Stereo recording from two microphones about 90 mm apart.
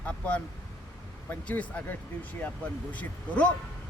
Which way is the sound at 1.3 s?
15° left (ahead or behind).